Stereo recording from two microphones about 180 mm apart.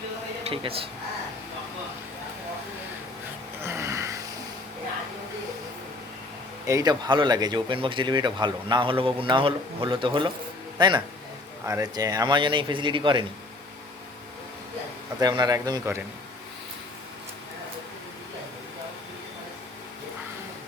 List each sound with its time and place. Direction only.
0.4 s speech: 30° right (ahead or behind)
3.6 s music: 15° right (ahead or behind)
6.7 s speech: 20° right (ahead or behind)
15.2 s speech: 20° right (ahead or behind)